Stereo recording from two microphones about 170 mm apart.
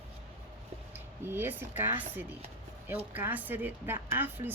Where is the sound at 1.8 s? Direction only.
10° right (ahead or behind).